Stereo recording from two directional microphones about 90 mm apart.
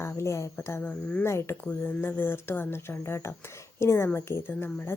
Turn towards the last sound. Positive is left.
turn(degrees=25)  # may be behind; listen again after turning